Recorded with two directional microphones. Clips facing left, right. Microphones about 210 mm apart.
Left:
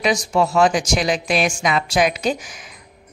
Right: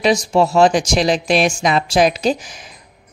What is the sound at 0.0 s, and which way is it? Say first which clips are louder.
Speech: right 4 dB; 30° right (ahead or behind).